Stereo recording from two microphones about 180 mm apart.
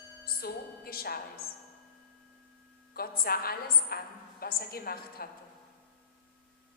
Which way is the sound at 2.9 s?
55° left (ahead or behind).